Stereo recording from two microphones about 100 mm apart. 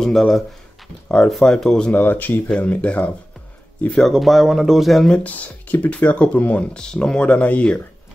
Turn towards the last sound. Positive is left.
turn(degrees=15)  # may be behind; listen again after turning